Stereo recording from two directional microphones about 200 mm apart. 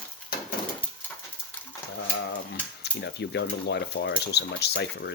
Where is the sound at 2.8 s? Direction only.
60° left (ahead or behind).